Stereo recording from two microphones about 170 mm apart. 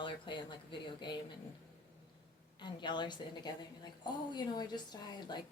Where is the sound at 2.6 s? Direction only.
25° left (ahead or behind).